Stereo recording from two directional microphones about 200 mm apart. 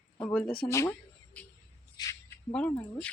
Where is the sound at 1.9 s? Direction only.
15° left (ahead or behind).